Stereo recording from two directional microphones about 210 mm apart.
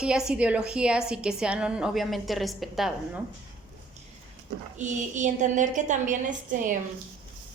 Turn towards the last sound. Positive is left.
turn(degrees=-40)  # may be behind; listen again after turning